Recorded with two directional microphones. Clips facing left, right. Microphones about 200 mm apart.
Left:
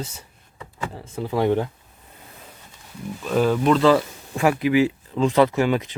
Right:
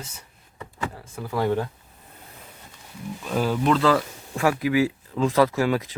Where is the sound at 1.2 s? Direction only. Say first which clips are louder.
Left 3 dB; 20° left (ahead or behind).